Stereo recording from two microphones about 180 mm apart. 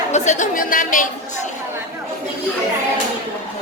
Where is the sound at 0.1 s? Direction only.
40° left (ahead or behind).